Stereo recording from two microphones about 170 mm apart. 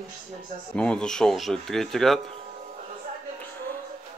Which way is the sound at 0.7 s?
5° left (ahead or behind).